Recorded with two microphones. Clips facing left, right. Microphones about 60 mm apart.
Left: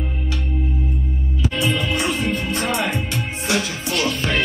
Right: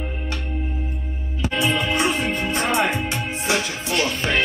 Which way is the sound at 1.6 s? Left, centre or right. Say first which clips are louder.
Right 2 dB; centre.